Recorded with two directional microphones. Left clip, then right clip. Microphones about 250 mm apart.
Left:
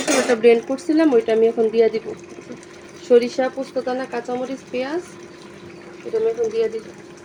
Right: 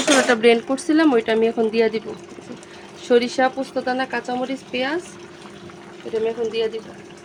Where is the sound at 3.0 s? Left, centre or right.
Centre.